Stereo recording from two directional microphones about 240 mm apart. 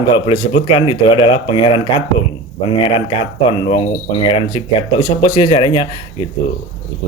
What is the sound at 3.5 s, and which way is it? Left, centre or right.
Speech, left.